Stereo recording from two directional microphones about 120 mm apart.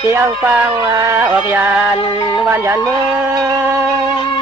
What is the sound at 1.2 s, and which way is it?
Speech, 15° right (ahead or behind).